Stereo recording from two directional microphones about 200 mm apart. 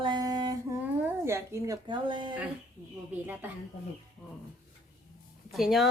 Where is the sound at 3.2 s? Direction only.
10° right (ahead or behind).